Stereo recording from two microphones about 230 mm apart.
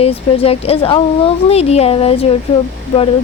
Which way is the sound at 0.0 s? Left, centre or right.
Left.